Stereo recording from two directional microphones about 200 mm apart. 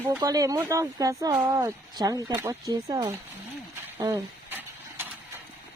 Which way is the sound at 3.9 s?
10° right (ahead or behind).